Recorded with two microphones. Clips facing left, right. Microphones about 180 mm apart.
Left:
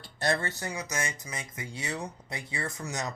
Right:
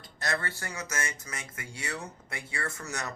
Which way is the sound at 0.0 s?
30° left (ahead or behind).